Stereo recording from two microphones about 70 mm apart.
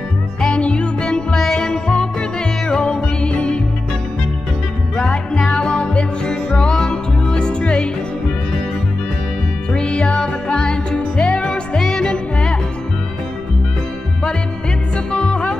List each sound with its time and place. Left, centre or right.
0.4 s music: centre
4.9 s music: centre
9.7 s music: centre
15.1 s music: centre